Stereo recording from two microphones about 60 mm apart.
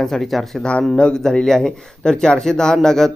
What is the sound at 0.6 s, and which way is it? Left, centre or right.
Speech, centre.